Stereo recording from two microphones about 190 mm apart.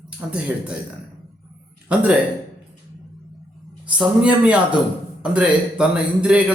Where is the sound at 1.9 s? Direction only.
5° right (ahead or behind).